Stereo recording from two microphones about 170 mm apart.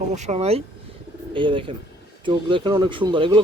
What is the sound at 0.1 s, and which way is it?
A man's voice, 40° right (ahead or behind).